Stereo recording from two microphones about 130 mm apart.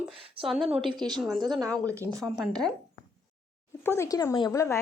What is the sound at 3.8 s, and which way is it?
Speech, 25° left (ahead or behind).